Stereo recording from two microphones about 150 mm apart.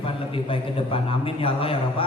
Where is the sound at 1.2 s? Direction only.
35° left (ahead or behind).